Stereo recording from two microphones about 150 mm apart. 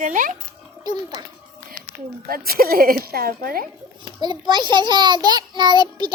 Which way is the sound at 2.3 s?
80° right.